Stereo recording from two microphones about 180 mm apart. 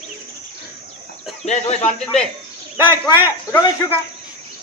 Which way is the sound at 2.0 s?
5° left (ahead or behind).